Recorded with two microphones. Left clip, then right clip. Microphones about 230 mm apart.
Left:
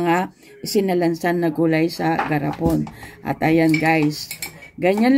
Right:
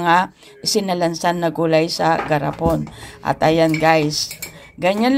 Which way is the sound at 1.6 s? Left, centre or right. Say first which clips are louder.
Right 6 dB; centre.